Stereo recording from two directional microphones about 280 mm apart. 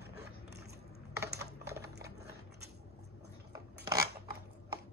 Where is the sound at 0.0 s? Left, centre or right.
Right.